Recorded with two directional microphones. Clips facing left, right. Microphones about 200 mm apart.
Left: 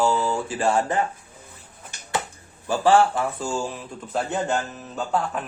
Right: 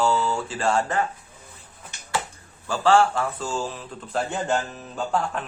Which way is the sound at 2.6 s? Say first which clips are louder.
Left 1 dB; 15° left (ahead or behind).